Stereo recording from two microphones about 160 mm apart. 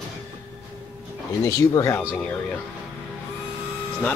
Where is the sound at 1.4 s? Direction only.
20° left (ahead or behind).